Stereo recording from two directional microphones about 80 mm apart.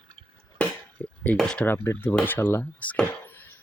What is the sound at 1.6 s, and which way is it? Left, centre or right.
Speech, left.